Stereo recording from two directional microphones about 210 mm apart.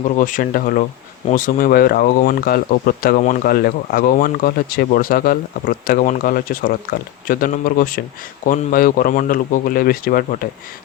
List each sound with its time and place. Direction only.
0.2 s speech: 40° left (ahead or behind)